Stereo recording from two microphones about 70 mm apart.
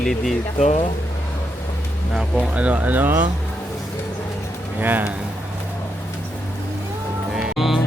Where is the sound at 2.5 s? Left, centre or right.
Centre.